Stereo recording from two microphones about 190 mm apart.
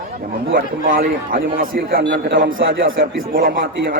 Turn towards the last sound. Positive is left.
turn(degrees=-50)  # may be behind; listen again after turning